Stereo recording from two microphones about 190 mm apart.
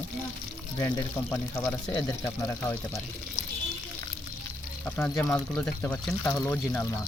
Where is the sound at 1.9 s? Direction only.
25° left (ahead or behind).